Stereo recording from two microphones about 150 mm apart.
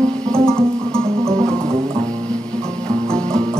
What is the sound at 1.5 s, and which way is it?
Music, 20° right (ahead or behind).